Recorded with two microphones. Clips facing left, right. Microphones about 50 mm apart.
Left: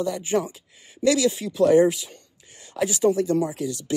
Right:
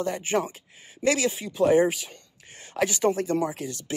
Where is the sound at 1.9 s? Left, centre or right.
Right.